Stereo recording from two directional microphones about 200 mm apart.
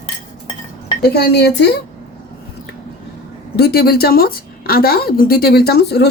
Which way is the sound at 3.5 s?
50° left (ahead or behind).